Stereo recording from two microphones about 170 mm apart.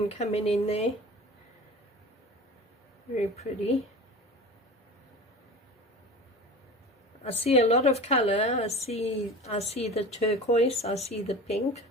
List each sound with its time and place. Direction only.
0.0 s a woman's voice: 40° left (ahead or behind)
3.2 s a woman's voice: 40° left (ahead or behind)
7.4 s a woman's voice: 40° left (ahead or behind)